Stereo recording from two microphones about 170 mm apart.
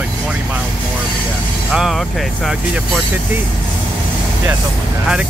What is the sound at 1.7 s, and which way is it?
Speech, centre (ahead or behind).